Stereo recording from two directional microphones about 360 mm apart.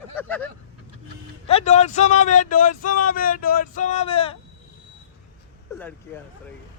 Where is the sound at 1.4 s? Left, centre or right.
Centre.